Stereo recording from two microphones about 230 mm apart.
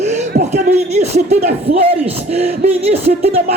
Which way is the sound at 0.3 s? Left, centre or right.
Right.